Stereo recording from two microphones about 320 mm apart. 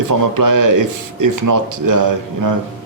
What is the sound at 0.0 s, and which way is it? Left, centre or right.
Speech, right.